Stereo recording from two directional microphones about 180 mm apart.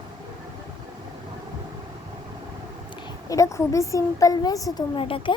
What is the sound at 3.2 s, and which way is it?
A woman's voice, 20° left (ahead or behind).